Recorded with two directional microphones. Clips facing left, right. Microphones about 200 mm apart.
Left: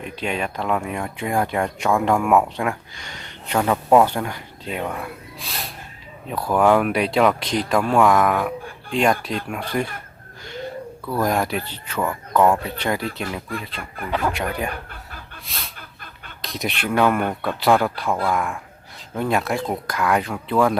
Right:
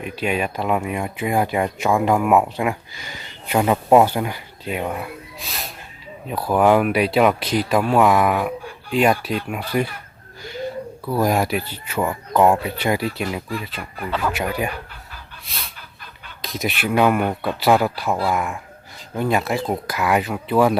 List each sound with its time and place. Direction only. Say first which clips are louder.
0.0 s speech: right 3 dB; 5° right (ahead or behind)
11.0 s speech: right 2 dB; 10° right (ahead or behind)
14.2 s speech: right 1 dB; 5° right (ahead or behind)
15.4 s a sound: right 1 dB; centre (ahead or behind)
16.4 s speech: right 2 dB; centre (ahead or behind)